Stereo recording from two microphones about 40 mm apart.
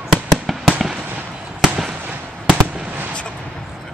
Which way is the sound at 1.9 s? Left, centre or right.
Right.